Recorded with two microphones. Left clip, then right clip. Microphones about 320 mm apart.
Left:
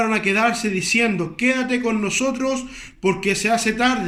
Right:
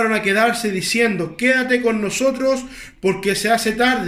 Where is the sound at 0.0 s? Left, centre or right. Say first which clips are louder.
Right 2 dB; centre.